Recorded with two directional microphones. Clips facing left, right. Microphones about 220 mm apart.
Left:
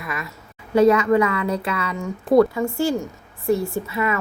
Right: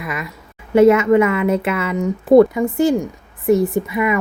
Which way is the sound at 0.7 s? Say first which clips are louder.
Right 4 dB; 25° right (ahead or behind).